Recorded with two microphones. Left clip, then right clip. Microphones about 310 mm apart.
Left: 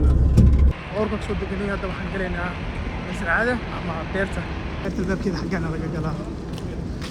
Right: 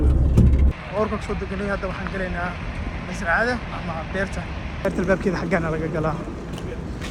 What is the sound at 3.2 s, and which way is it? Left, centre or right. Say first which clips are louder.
Speech: right 1 dB; centre.